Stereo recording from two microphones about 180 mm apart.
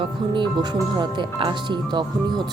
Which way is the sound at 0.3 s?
25° right (ahead or behind).